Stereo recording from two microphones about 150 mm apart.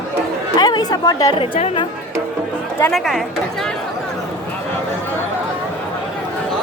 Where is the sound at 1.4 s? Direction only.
35° left (ahead or behind).